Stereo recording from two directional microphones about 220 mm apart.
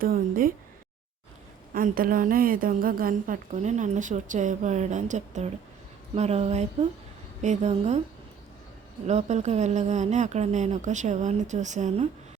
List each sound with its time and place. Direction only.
0.0 s a woman's voice: 40° right (ahead or behind)
1.7 s a woman's voice: 40° right (ahead or behind)
9.0 s a woman's voice: 30° right (ahead or behind)